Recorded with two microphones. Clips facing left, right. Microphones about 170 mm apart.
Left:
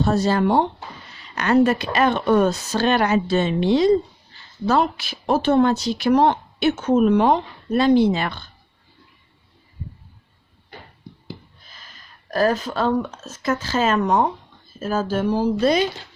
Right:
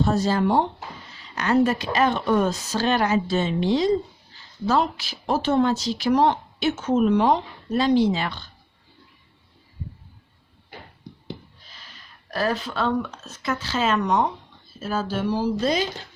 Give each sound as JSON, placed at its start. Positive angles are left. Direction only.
{"t": 0.0, "sound": "speech", "side_deg": 70}
{"t": 11.7, "sound": "speech", "side_deg": 45}